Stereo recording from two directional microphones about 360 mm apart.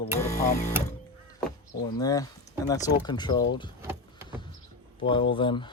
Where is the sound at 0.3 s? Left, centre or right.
Centre.